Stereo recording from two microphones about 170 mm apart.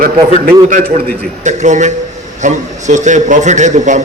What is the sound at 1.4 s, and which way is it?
A man's voice, 45° right (ahead or behind).